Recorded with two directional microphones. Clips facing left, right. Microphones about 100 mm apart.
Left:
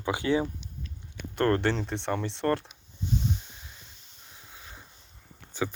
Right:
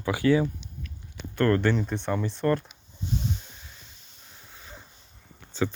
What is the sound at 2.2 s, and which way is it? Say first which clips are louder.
Speech: right 2 dB; 70° left (ahead or behind).